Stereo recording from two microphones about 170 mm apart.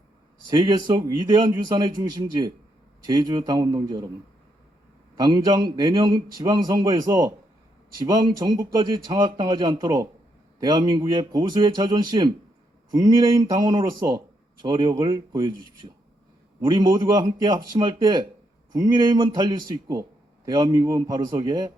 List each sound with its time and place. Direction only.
0.4 s a man's voice: 25° right (ahead or behind)
5.1 s a man's voice: 25° right (ahead or behind)
16.6 s a man's voice: 25° right (ahead or behind)